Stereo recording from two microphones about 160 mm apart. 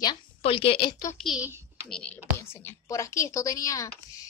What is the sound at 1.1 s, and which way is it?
A woman's voice, centre (ahead or behind).